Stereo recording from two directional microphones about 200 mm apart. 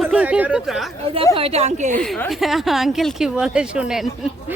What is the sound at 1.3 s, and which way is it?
Speech, 30° right (ahead or behind).